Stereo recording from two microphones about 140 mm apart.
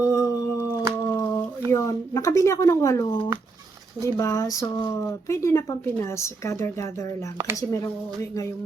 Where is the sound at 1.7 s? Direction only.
25° left (ahead or behind).